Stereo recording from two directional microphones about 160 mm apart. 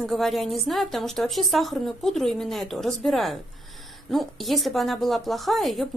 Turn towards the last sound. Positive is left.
turn(degrees=0)  # may be behind; listen again after turning